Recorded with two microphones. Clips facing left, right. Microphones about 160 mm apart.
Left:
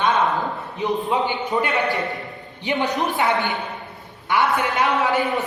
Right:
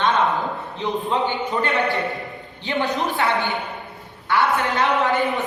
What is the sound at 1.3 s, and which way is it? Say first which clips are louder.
A man's voice: even; 20° left (ahead or behind).